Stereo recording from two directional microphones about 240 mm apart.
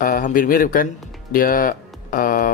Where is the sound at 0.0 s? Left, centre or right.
Left.